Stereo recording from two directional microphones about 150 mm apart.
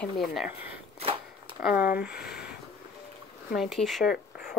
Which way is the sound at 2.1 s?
90° left.